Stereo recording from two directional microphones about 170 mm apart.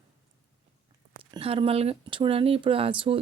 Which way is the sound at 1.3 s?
35° right (ahead or behind).